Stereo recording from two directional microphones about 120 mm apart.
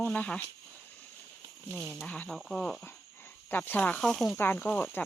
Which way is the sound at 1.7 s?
20° right (ahead or behind).